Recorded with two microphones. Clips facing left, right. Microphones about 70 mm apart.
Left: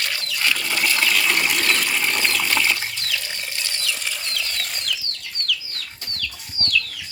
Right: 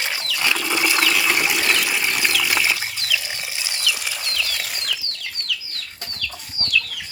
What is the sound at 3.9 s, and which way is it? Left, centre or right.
Bird flight, centre.